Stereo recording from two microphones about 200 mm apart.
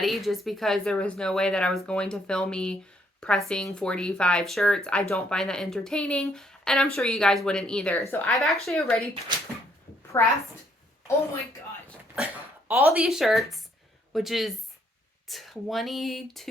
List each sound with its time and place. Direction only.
0.0 s speech: centre (ahead or behind)
10.2 s a woman's voice: 10° left (ahead or behind)
12.1 s speech: 5° right (ahead or behind)